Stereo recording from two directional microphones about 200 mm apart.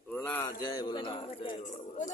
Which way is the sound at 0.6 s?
20° left (ahead or behind).